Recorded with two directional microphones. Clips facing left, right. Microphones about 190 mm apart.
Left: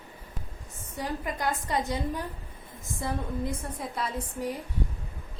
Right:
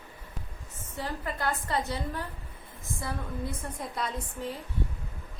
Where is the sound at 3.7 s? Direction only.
5° left (ahead or behind).